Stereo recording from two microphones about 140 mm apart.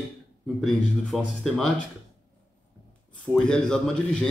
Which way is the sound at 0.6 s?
Centre (ahead or behind).